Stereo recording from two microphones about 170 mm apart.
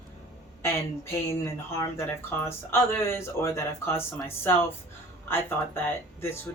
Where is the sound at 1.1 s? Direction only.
20° left (ahead or behind).